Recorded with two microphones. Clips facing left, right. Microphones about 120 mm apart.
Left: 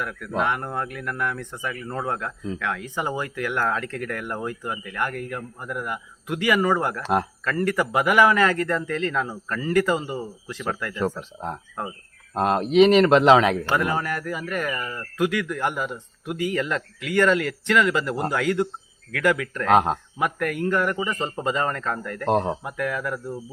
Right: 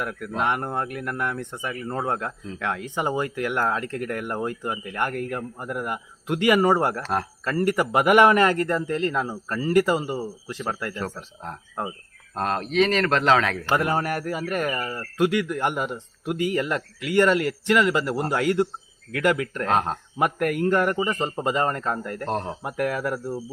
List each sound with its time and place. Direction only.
0.0 s speech: 20° right (ahead or behind)
7.0 s speech: 15° left (ahead or behind)
7.4 s speech: 25° right (ahead or behind)
9.5 s speech: 30° right (ahead or behind)
9.9 s speech: 10° right (ahead or behind)
10.5 s speech: 30° right (ahead or behind)
11.0 s speech: 20° left (ahead or behind)
13.7 s speech: 25° right (ahead or behind)
19.7 s speech: 15° left (ahead or behind)
20.1 s speech: 25° right (ahead or behind)
22.3 s speech: 20° left (ahead or behind)
22.6 s speech: 25° right (ahead or behind)